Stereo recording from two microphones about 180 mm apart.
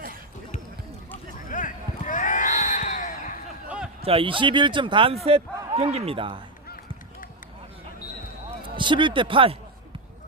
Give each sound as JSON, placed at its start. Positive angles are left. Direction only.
{"t": 1.5, "sound": "a sound", "side_deg": 45}
{"t": 4.0, "sound": "a man's voice", "side_deg": -30}
{"t": 8.4, "sound": "speech", "side_deg": -25}